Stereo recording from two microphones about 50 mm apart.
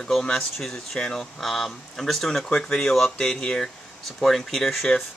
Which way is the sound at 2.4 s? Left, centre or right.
Centre.